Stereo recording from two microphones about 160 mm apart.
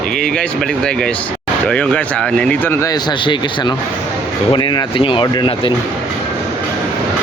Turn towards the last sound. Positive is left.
turn(degrees=30)  # may be behind; listen again after turning